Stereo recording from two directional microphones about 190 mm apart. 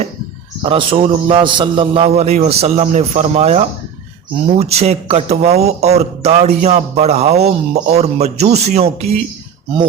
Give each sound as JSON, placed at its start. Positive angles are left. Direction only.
{"t": 0.6, "sound": "a man's voice", "side_deg": -25}